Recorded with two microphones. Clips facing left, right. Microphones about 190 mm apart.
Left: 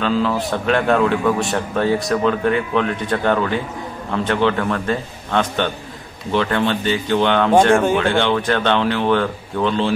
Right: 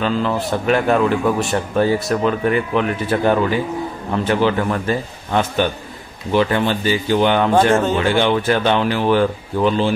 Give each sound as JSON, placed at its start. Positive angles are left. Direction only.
{"t": 0.0, "sound": "speech", "side_deg": 0}